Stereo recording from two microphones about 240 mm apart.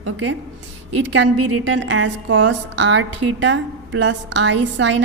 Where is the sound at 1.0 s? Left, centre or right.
Right.